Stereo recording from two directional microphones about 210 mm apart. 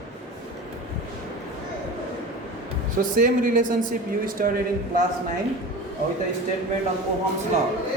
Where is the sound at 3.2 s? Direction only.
40° right (ahead or behind).